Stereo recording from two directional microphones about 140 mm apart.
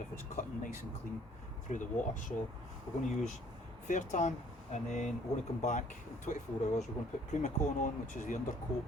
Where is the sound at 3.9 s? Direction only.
60° left (ahead or behind).